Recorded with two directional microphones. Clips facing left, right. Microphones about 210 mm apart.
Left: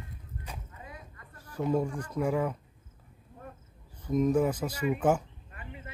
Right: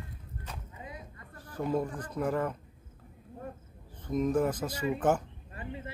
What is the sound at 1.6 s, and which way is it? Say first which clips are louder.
Speech: left 2 dB; 10° left (ahead or behind).